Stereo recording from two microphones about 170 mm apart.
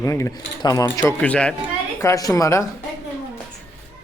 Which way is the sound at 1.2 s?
5° left (ahead or behind).